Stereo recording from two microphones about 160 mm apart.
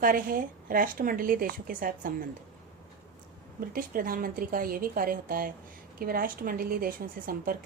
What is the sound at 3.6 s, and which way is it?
A woman's voice, 65° right (ahead or behind).